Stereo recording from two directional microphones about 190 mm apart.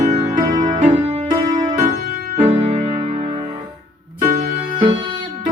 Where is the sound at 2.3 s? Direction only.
35° right (ahead or behind).